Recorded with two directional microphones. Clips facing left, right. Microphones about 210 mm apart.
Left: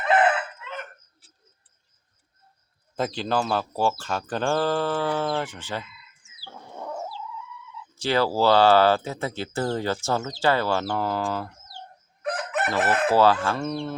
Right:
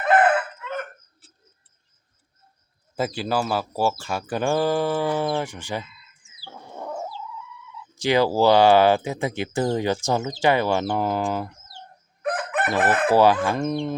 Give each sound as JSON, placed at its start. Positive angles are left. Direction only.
{"t": 0.0, "sound": "crowing", "side_deg": -50}
{"t": 2.9, "sound": "speech", "side_deg": -5}
{"t": 6.4, "sound": "a sound", "side_deg": -5}
{"t": 7.9, "sound": "speech", "side_deg": -15}
{"t": 12.2, "sound": "crowing", "side_deg": -55}
{"t": 12.8, "sound": "chicken", "side_deg": -50}
{"t": 13.1, "sound": "speech", "side_deg": -15}